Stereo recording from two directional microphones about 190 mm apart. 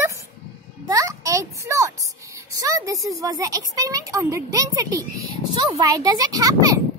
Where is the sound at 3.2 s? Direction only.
20° right (ahead or behind).